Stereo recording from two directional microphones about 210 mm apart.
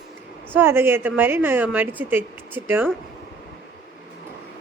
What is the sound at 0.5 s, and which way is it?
Speech, 10° right (ahead or behind).